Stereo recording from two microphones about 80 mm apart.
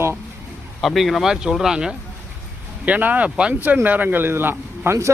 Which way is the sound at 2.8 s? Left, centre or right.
Centre.